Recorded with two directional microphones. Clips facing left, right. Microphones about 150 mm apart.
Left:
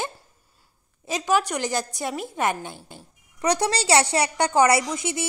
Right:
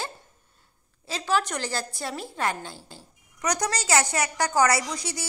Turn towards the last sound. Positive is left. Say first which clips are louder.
# left 5 dB
turn(degrees=25)  # may be behind; listen again after turning